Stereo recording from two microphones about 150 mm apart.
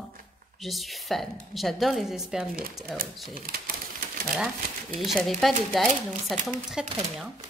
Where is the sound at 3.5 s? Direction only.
75° right (ahead or behind).